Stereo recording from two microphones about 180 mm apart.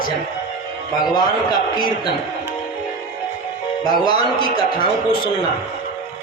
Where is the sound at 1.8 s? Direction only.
25° left (ahead or behind).